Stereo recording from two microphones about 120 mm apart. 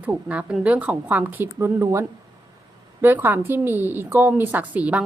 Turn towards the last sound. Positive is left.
turn(degrees=-10)  # may be behind; listen again after turning